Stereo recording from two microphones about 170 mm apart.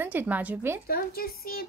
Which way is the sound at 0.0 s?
10° right (ahead or behind).